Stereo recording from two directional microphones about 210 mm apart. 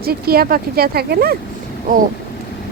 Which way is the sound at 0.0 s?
45° right (ahead or behind).